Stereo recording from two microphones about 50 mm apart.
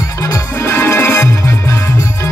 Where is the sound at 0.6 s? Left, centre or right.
Left.